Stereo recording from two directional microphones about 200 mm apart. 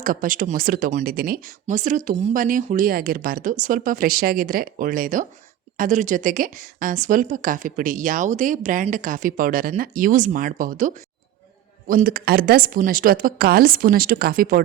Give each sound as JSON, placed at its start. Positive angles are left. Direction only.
{"t": 0.0, "sound": "a woman's voice", "side_deg": -45}